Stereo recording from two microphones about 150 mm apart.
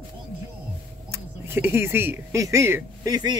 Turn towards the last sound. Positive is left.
turn(degrees=-25)  # may be behind; listen again after turning